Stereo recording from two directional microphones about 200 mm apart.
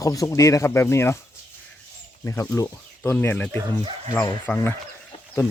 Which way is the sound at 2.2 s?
10° left (ahead or behind).